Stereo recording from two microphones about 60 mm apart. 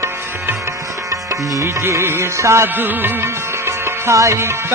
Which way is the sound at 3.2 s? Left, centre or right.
Right.